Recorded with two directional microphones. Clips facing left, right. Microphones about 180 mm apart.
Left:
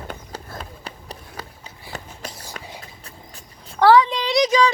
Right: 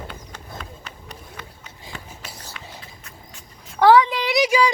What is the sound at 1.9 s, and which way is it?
Run, 40° left (ahead or behind).